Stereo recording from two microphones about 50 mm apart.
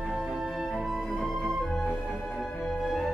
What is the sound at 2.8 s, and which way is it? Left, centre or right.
Music, centre.